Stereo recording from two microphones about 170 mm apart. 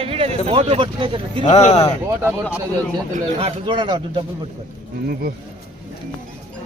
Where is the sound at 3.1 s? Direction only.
35° right (ahead or behind).